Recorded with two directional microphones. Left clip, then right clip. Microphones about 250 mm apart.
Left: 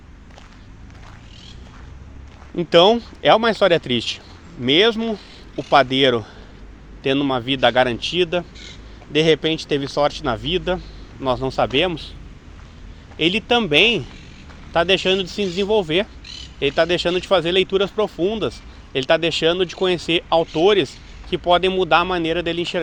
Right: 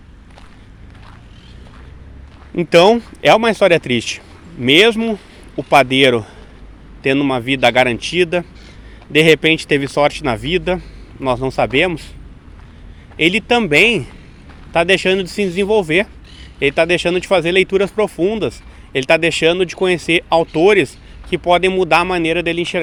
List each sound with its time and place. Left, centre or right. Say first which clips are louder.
2.6 s speech: right 3 dB; centre
13.1 s speech: right 4 dB; centre